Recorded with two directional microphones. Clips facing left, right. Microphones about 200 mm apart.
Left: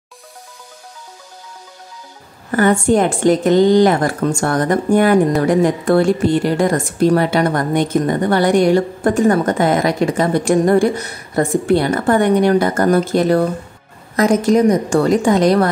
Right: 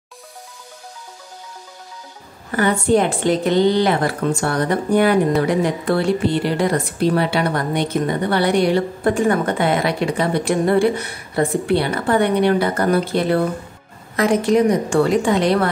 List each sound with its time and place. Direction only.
2.5 s a woman's voice: 45° left (ahead or behind)